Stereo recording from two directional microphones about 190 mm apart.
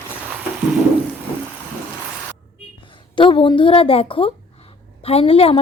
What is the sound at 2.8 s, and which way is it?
A woman's voice, 25° left (ahead or behind).